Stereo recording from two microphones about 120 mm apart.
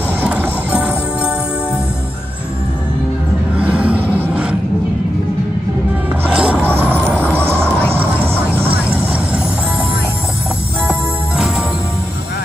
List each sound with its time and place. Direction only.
0.2 s music: 10° right (ahead or behind)
3.5 s a sound: 10° right (ahead or behind)
6.2 s vehicle: 10° right (ahead or behind)
10.9 s music: 5° right (ahead or behind)